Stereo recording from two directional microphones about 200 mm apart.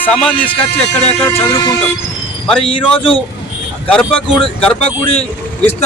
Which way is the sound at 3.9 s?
5° left (ahead or behind).